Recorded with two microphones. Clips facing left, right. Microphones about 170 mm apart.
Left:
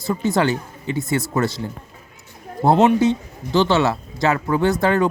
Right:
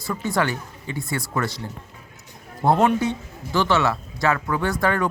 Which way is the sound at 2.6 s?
25° left (ahead or behind).